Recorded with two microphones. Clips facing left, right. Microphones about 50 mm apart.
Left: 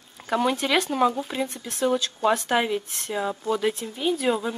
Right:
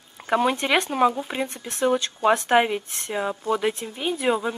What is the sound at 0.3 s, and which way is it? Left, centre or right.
A woman's voice, right.